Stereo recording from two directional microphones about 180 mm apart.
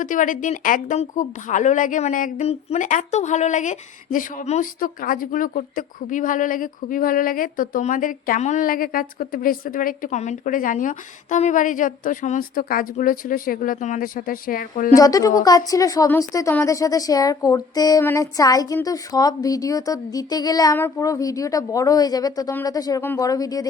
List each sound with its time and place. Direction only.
0.0 s a woman's voice: 45° left (ahead or behind)
14.9 s a woman's voice: 20° left (ahead or behind)